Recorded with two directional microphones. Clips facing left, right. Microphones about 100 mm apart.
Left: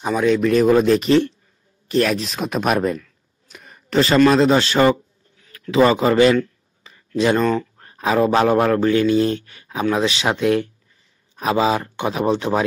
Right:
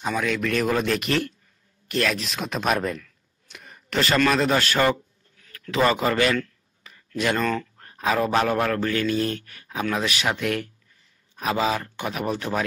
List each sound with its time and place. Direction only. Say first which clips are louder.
0.0 s speech: left 8 dB; 25° left (ahead or behind)
2.4 s speech: left 5 dB; 10° left (ahead or behind)
2.8 s speech: left 7 dB; 25° left (ahead or behind)
3.4 s a sound: left 3 dB; 35° left (ahead or behind)
4.2 s speech: left 8 dB; 25° left (ahead or behind)